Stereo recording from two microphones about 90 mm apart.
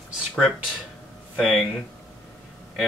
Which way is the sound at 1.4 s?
5° left (ahead or behind).